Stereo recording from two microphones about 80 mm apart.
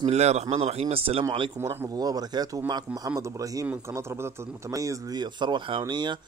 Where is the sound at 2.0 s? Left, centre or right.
Right.